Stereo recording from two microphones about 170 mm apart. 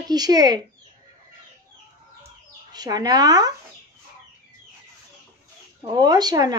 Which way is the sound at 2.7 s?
25° right (ahead or behind).